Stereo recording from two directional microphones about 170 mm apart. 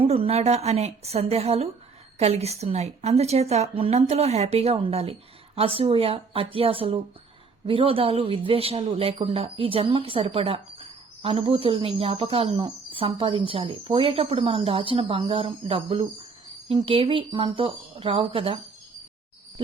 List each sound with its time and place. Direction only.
0.0 s speech: 35° right (ahead or behind)